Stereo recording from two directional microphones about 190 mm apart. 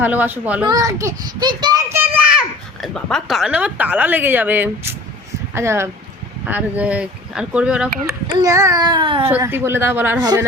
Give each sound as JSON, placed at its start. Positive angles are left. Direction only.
{"t": 0.0, "sound": "a woman's voice", "side_deg": -10}
{"t": 8.4, "sound": "a child's voice", "side_deg": -15}
{"t": 9.3, "sound": "a woman's voice", "side_deg": -10}
{"t": 10.2, "sound": "a child's voice", "side_deg": -20}